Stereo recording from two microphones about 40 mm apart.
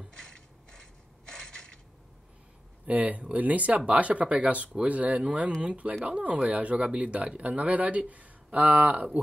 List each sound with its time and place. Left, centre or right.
0.1 s mechanisms: centre
2.9 s speech: right